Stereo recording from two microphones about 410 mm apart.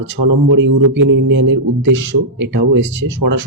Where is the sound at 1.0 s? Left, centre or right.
Right.